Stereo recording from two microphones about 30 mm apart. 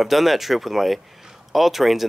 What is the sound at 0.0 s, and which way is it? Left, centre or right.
Speech, centre.